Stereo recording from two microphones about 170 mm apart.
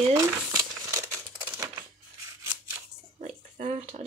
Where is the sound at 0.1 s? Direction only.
20° right (ahead or behind).